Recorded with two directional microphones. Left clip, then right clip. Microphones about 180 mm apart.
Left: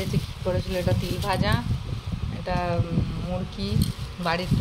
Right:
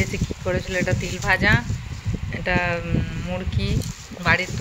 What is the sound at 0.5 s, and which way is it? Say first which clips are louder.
Speech: right 3 dB; 5° right (ahead or behind).